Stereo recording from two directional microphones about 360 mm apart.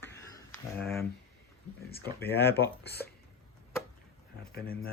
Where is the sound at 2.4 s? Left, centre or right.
Left.